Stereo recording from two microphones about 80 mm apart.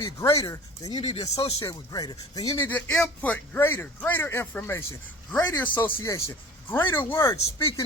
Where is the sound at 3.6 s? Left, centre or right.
Left.